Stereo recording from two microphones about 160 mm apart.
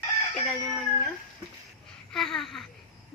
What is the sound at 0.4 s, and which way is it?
Speech, 5° left (ahead or behind).